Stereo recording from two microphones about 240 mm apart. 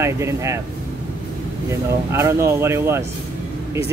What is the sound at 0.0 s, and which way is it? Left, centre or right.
Speech, centre.